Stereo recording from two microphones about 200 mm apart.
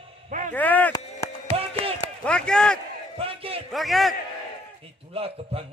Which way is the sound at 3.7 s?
Centre (ahead or behind).